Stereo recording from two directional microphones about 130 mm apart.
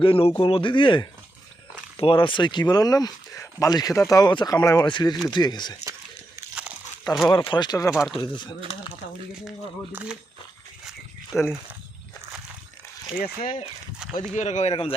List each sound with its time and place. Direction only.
0.0 s speech: 45° left (ahead or behind)
7.3 s speech: 40° left (ahead or behind)
7.9 s speech: centre (ahead or behind)
8.1 s speech: 35° left (ahead or behind)
9.9 s speech: 10° right (ahead or behind)
11.3 s speech: centre (ahead or behind)
14.0 s a sound: 5° right (ahead or behind)
14.3 s speech: 60° left (ahead or behind)